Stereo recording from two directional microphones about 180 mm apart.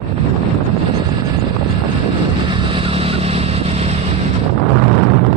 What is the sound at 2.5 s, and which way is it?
Vehicle, 30° right (ahead or behind).